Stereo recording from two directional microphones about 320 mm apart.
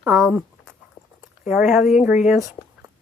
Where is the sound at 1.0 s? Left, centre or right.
Left.